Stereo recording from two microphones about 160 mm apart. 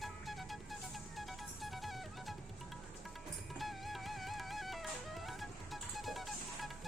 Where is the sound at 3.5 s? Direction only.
Centre (ahead or behind).